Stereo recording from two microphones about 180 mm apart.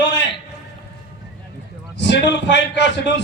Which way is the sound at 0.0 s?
80° left.